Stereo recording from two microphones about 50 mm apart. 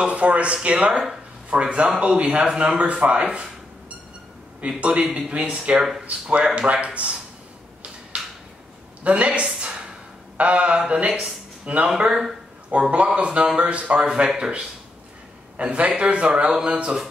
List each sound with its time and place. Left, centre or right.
0.0 s speech: right
0.8 s speech: centre
4.6 s speech: right
6.2 s speech: right
9.0 s a woman's voice: right
10.3 s mantra: right
10.9 s speech: right
11.9 s speech: centre
12.9 s a man's voice: right